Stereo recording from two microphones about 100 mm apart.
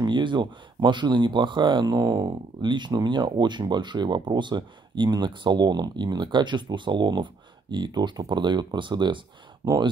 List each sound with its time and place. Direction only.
0.0 s speech: 50° right (ahead or behind)
2.0 s speech: 40° right (ahead or behind)
9.6 s speech: 35° right (ahead or behind)